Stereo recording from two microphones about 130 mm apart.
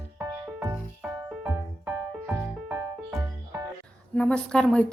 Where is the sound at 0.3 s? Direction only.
25° right (ahead or behind).